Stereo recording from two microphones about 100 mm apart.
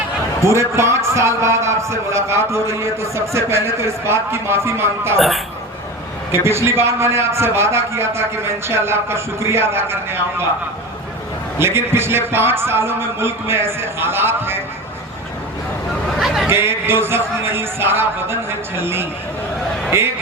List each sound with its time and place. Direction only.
0.4 s a man's voice: 30° right (ahead or behind)
6.3 s a man's voice: 25° right (ahead or behind)
11.6 s a man's voice: 25° right (ahead or behind)
16.1 s a sound: centre (ahead or behind)
16.5 s a man's voice: 25° right (ahead or behind)